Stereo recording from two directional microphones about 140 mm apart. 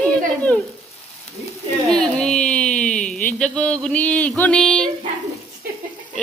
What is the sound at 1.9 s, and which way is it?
Carnatic music, 5° left (ahead or behind).